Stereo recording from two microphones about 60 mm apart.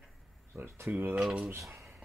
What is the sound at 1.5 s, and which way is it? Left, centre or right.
Speech, right.